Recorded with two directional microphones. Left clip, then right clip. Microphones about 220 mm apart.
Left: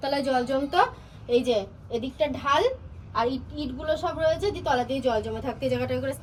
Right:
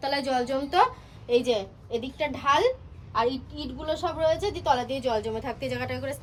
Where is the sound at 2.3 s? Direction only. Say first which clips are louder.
Right 2 dB; 30° right (ahead or behind).